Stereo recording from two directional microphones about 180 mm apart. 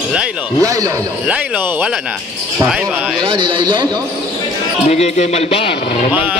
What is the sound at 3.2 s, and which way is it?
Speech, 30° right (ahead or behind).